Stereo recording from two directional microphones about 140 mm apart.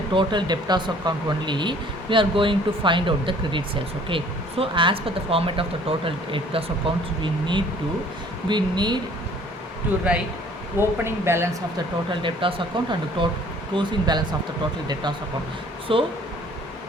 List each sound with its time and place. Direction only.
0.1 s speech: 35° right (ahead or behind)
10.1 s speech: 10° right (ahead or behind)
12.2 s speech: 40° right (ahead or behind)
15.9 s speech: 40° right (ahead or behind)